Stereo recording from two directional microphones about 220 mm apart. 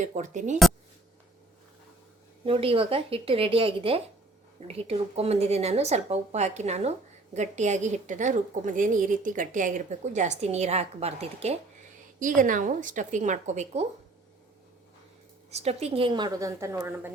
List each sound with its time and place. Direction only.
0.0 s a woman's voice: 35° right (ahead or behind)
2.4 s a woman's voice: 25° right (ahead or behind)
15.4 s speech: 30° right (ahead or behind); by 17.1 s 10° right (ahead or behind)